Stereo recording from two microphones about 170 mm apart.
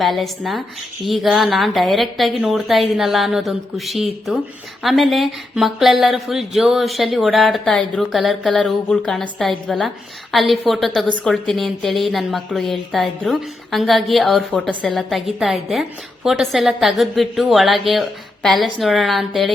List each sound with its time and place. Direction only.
0.0 s a woman's voice: centre (ahead or behind)